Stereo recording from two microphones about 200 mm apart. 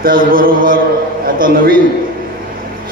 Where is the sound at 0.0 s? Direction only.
45° right (ahead or behind).